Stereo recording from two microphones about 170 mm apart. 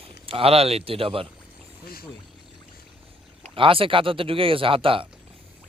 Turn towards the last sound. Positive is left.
turn(degrees=-30)  # may be behind; listen again after turning